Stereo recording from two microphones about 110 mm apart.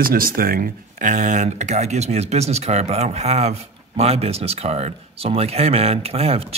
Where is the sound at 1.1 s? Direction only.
90° right.